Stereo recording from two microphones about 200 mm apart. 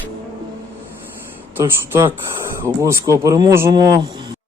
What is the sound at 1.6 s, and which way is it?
Speech, 10° right (ahead or behind).